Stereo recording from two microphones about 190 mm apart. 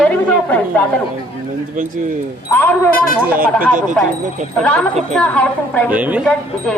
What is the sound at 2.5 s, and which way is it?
Speech, 10° left (ahead or behind).